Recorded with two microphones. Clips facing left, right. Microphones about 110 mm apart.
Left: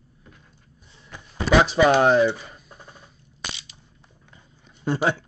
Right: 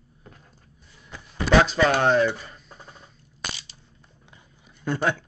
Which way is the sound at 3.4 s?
40° right (ahead or behind).